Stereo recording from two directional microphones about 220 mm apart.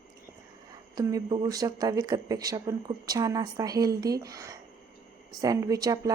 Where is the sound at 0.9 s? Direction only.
20° right (ahead or behind).